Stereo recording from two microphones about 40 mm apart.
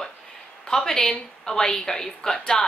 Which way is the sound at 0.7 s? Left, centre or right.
Centre.